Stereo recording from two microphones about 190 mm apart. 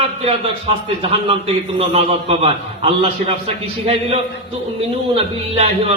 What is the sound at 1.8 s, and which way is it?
Speech, 30° right (ahead or behind).